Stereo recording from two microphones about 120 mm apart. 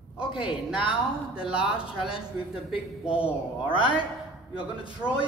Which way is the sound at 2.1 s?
50° left (ahead or behind).